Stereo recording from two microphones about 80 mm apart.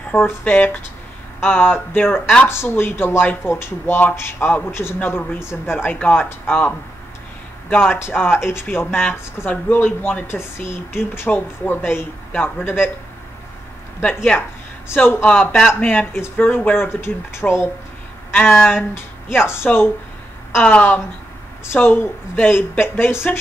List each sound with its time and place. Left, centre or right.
0.1 s speech: left
7.7 s speech: left
14.0 s speech: centre
15.0 s speech: left
15.2 s speech: centre; by 17.6 s left
18.3 s speech: left
20.6 s speech: centre